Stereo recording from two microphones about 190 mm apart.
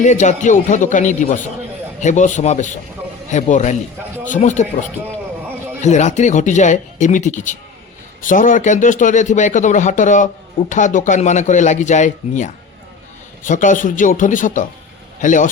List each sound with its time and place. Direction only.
0.0 s speech: 40° left (ahead or behind)